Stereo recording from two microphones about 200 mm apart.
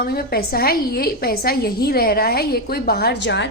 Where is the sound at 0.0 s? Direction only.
50° left (ahead or behind).